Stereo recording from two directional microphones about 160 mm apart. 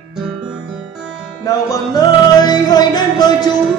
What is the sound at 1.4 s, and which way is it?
Music, 20° left (ahead or behind).